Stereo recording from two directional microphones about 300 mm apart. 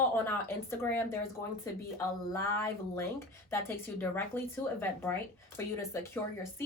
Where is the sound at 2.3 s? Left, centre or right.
Centre.